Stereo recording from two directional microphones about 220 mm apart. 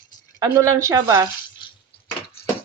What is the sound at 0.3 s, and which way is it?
Speech, 15° right (ahead or behind).